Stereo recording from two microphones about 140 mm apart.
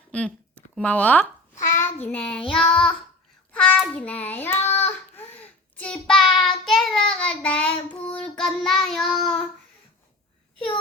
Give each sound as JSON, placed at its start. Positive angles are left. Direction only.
{"t": 0.1, "sound": "speech", "side_deg": 10}
{"t": 1.7, "sound": "child singing", "side_deg": 15}
{"t": 2.0, "sound": "child singing", "side_deg": 5}